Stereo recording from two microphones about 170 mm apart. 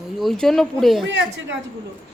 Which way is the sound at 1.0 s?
90° right.